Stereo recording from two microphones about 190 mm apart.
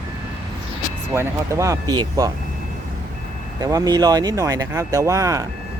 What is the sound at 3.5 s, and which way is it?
Speech, 20° right (ahead or behind).